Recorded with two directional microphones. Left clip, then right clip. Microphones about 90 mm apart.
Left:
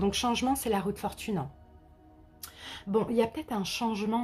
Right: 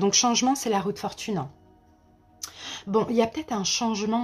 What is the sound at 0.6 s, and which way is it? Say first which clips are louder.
Speech: right 4 dB; 25° right (ahead or behind).